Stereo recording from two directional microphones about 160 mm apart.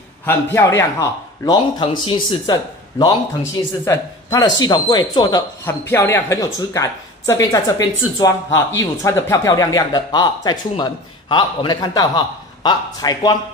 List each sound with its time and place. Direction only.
0.2 s speech: 15° left (ahead or behind)
5.7 s speech: 15° left (ahead or behind)